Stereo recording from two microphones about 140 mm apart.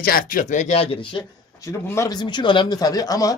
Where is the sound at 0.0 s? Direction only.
90° left; by 1.2 s 40° left (ahead or behind).